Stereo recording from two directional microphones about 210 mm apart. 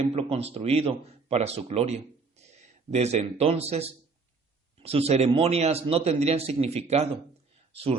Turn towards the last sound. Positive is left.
turn(degrees=-30)  # may be behind; listen again after turning